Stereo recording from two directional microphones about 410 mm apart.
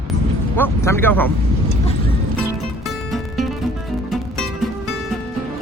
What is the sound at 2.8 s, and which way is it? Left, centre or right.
Music, centre.